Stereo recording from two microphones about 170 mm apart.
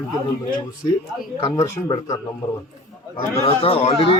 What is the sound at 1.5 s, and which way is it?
Speech, 20° left (ahead or behind).